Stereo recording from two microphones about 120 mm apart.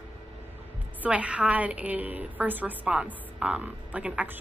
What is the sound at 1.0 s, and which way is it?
A woman's voice, 10° right (ahead or behind).